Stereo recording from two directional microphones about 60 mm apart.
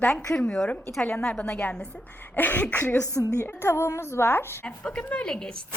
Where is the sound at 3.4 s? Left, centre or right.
Left.